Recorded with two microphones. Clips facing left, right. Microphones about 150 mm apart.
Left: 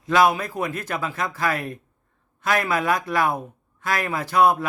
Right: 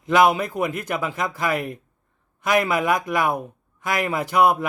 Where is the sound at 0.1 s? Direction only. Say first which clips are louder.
Right 1 dB; 15° right (ahead or behind).